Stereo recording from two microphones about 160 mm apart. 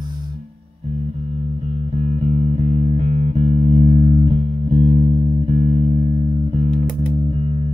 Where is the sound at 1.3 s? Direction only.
40° right (ahead or behind).